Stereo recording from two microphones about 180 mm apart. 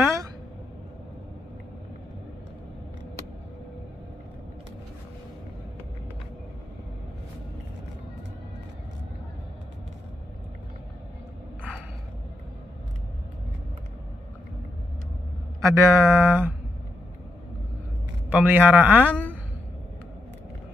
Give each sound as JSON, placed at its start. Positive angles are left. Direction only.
{"t": 0.0, "sound": "a sound", "side_deg": -15}
{"t": 15.6, "sound": "speech", "side_deg": -15}
{"t": 18.3, "sound": "speech", "side_deg": -10}